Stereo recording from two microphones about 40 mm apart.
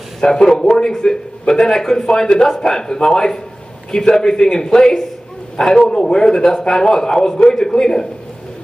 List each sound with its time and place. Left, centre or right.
0.2 s a man's voice: centre